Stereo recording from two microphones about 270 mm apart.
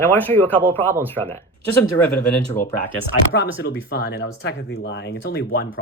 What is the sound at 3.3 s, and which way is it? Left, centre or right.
Speech, left.